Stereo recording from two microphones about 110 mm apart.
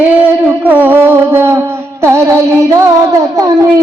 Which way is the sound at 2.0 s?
25° right (ahead or behind).